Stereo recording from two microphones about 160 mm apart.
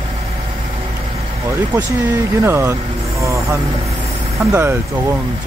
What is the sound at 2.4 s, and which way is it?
Speech, 15° right (ahead or behind).